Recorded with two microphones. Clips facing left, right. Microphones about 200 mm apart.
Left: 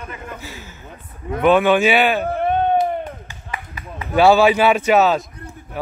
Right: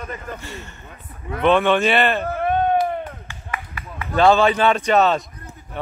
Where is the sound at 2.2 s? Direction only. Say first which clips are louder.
Left 1 dB; 25° left (ahead or behind).